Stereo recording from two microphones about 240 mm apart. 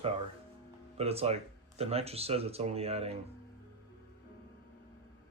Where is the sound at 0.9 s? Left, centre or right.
Right.